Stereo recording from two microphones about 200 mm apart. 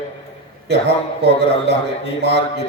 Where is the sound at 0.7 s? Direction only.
55° right (ahead or behind).